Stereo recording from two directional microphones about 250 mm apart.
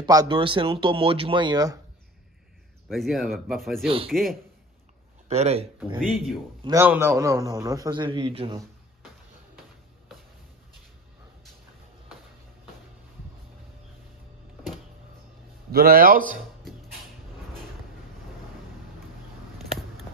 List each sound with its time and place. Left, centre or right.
0.0 s speech: centre
2.9 s speech: centre
3.8 s speech: right
4.1 s speech: centre
5.3 s speech: right
5.9 s speech: centre
6.6 s a man's voice: centre
15.7 s a man's voice: right